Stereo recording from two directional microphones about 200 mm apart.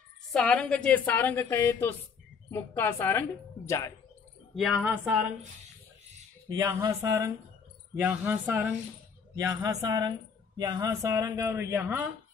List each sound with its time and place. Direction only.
0.3 s a woman's voice: 5° left (ahead or behind)
4.6 s a man's voice: 5° right (ahead or behind)
6.5 s a man's voice: 15° right (ahead or behind)